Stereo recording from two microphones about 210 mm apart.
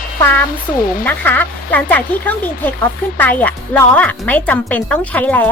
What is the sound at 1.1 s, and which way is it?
Speech, 10° left (ahead or behind).